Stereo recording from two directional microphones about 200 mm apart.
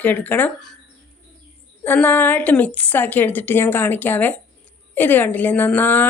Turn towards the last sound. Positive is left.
turn(degrees=10)  # may be behind; listen again after turning